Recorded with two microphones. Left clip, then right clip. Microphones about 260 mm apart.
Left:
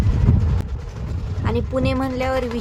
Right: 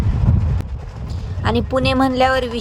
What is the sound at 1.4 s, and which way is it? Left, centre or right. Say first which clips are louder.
A woman's voice: right 5 dB; right.